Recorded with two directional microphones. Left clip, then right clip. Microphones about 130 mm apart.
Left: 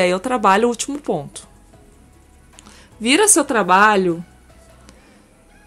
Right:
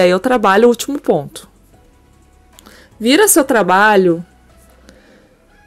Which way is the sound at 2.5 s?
35° right (ahead or behind).